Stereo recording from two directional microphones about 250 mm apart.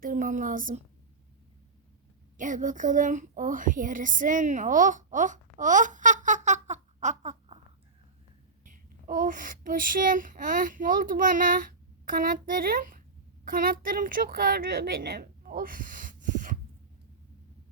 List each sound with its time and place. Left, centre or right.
0.0 s a woman's voice: right
2.4 s a child's voice: right
8.6 s a child's voice: right